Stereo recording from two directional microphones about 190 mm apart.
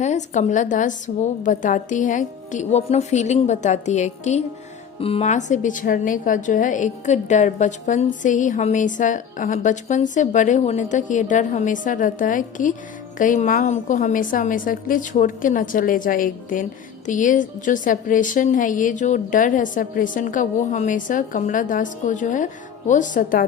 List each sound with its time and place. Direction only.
0.0 s a woman's voice: 40° left (ahead or behind)